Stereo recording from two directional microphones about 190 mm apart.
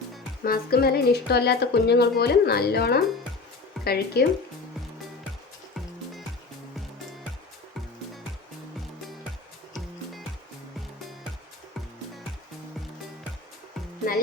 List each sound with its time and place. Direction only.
0.4 s speech: 50° left (ahead or behind)